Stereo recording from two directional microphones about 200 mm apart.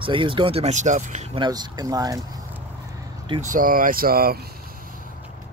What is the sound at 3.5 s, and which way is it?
Speech, 45° right (ahead or behind).